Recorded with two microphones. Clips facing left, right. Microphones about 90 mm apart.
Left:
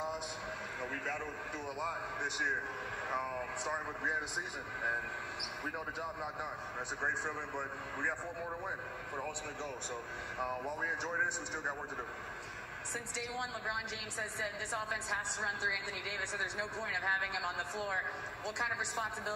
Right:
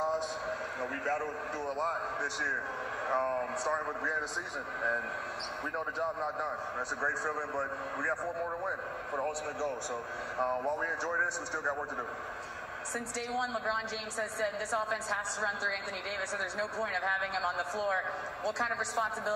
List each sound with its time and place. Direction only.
1.0 s a man's voice: 25° right (ahead or behind)
3.1 s a man's voice: 30° right (ahead or behind)
5.9 s a man's voice: 30° right (ahead or behind)
10.3 s a man's voice: 30° right (ahead or behind)
14.7 s a man's voice: 25° right (ahead or behind)
16.8 s a man's voice: 50° right (ahead or behind)
18.6 s a man's voice: 25° right (ahead or behind)